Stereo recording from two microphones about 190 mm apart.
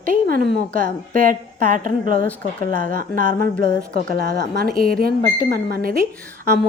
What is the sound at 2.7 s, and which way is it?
Speech, 45° right (ahead or behind).